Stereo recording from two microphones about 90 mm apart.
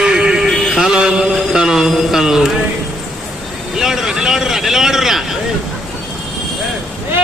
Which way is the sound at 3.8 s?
5° right (ahead or behind).